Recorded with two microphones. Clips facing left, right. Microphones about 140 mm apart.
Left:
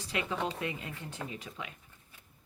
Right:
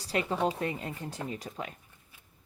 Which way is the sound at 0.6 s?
40° right (ahead or behind).